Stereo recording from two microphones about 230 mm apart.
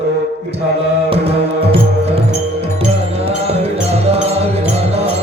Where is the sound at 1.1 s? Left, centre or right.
Right.